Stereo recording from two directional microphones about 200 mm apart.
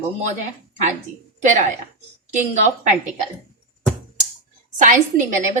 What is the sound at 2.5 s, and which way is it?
Speech, 35° right (ahead or behind).